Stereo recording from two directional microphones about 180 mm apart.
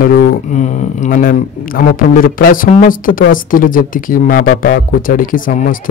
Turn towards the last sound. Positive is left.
turn(degrees=50)  # may be behind; listen again after turning